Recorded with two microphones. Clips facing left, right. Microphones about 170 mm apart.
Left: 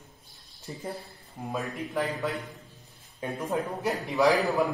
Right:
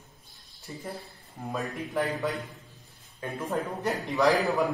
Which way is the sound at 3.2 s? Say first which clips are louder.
Left 2 dB; 20° left (ahead or behind).